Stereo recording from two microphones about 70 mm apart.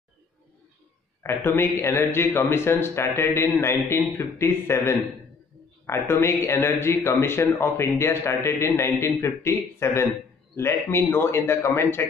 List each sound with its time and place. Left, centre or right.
1.2 s a man's voice: left